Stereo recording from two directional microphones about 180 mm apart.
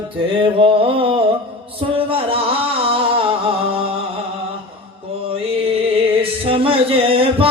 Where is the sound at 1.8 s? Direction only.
30° right (ahead or behind).